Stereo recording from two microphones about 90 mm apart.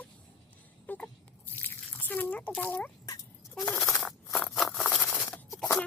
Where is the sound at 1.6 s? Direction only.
20° left (ahead or behind).